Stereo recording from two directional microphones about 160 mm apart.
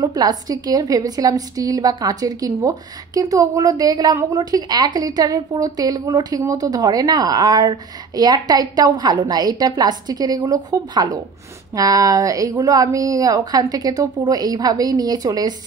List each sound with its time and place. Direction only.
0.0 s a woman's voice: 25° right (ahead or behind)